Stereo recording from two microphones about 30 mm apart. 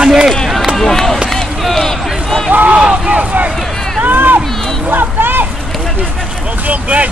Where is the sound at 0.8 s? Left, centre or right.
Centre.